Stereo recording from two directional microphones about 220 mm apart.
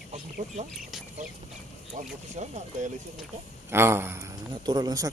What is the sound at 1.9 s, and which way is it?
Speech, 30° right (ahead or behind).